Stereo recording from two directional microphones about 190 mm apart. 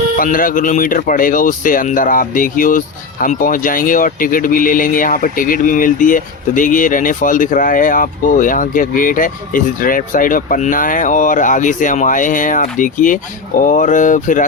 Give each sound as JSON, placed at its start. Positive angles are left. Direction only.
{"t": 0.2, "sound": "speech", "side_deg": 45}